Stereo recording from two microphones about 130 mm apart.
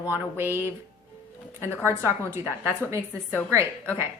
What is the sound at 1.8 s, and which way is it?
Speech, 20° right (ahead or behind).